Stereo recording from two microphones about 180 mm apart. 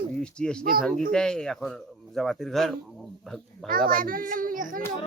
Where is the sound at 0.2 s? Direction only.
5° left (ahead or behind).